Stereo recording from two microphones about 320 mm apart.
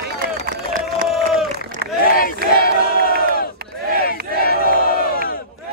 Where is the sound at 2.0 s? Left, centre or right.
Left.